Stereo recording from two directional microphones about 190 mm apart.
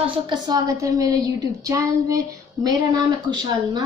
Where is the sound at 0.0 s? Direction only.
20° right (ahead or behind).